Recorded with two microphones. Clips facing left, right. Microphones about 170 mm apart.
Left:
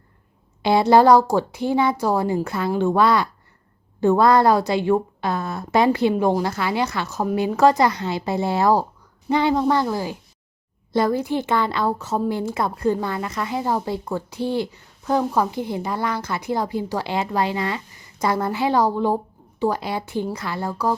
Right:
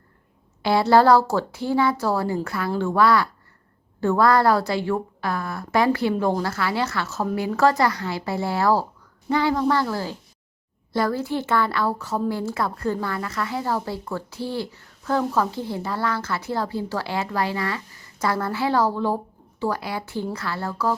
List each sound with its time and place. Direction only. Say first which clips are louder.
0.6 s a woman's voice: left 2 dB; 20° left (ahead or behind)